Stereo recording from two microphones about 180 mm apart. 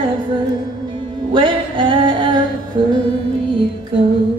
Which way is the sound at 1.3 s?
25° right (ahead or behind).